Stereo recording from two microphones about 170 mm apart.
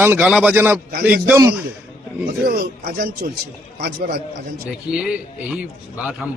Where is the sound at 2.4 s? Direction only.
60° right (ahead or behind).